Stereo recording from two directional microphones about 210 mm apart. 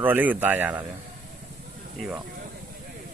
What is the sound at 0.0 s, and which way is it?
Speech, 10° right (ahead or behind).